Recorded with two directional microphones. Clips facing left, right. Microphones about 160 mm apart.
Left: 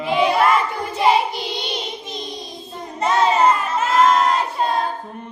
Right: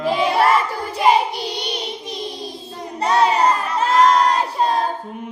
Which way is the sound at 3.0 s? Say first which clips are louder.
Even; 35° right (ahead or behind).